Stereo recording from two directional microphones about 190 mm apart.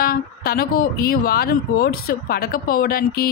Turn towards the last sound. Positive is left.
turn(degrees=50)  # may be behind; listen again after turning